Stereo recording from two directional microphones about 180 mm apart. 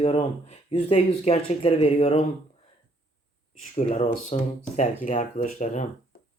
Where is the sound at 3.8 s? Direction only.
35° left (ahead or behind).